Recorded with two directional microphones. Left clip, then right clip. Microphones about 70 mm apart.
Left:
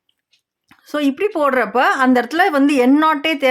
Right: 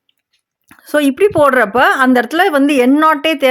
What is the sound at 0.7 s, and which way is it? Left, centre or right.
A woman's voice, right.